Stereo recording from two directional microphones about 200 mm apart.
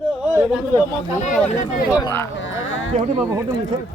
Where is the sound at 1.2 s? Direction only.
40° left (ahead or behind).